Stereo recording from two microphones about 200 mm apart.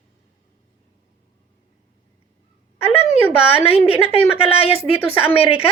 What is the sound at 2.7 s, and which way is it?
Speech, 30° left (ahead or behind).